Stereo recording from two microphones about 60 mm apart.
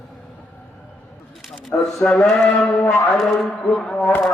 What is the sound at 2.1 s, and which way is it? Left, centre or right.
Mantra, centre.